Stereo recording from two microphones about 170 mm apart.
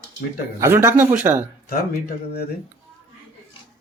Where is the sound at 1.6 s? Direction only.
65° left (ahead or behind).